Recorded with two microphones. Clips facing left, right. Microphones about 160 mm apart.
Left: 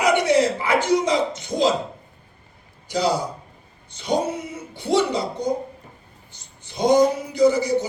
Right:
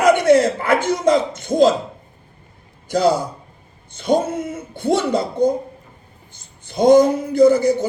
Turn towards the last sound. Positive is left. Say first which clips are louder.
# right 5 dB
turn(degrees=-50)  # may be behind; listen again after turning